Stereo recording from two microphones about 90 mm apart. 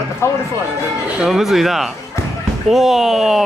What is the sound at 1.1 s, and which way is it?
Speech, 5° right (ahead or behind).